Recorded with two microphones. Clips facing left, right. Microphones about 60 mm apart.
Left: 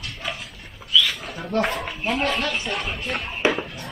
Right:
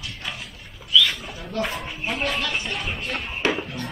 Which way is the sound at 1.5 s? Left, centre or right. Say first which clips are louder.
Left 4 dB; left.